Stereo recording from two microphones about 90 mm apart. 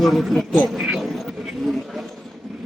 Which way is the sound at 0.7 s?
10° right (ahead or behind).